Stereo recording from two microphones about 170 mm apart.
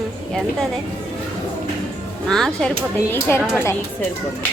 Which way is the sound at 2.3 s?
5° left (ahead or behind).